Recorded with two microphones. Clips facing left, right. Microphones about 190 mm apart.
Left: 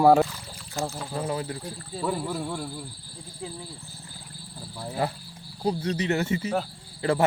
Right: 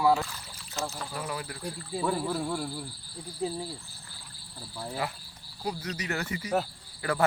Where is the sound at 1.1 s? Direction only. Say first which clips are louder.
Left 6 dB; 30° left (ahead or behind).